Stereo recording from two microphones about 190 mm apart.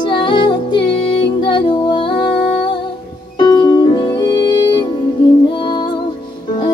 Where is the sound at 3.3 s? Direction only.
20° left (ahead or behind).